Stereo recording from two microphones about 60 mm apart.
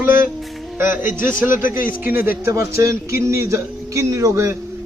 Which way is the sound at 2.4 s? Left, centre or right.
Right.